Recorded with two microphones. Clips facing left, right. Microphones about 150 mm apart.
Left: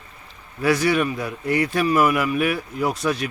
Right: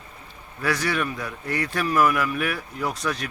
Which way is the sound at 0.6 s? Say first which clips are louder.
Left 6 dB; 15° left (ahead or behind).